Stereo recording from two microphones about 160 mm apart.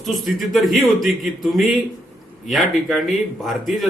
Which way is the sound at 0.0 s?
Centre (ahead or behind).